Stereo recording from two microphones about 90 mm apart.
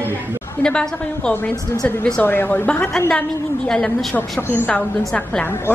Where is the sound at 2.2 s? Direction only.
20° left (ahead or behind).